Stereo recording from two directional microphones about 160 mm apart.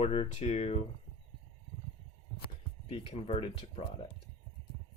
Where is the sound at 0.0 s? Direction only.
35° left (ahead or behind).